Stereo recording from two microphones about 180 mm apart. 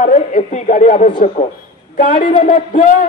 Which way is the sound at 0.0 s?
45° left (ahead or behind).